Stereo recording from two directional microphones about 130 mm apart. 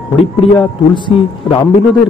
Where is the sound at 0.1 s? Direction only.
35° left (ahead or behind).